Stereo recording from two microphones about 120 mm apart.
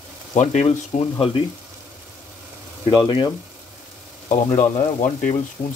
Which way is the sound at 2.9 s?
40° left (ahead or behind).